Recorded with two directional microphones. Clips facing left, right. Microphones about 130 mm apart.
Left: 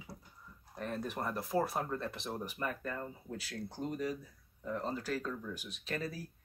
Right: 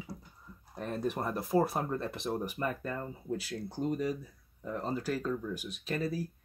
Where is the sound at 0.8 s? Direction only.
20° right (ahead or behind).